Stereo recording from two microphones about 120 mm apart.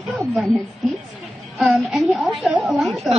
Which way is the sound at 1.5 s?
Centre (ahead or behind).